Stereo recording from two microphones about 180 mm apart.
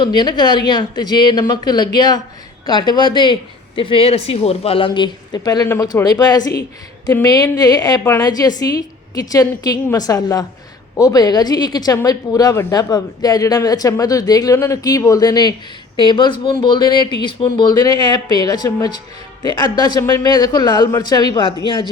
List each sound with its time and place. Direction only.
0.0 s speech: 25° left (ahead or behind)
6.5 s speech: 60° left (ahead or behind)
7.1 s speech: 20° left (ahead or behind)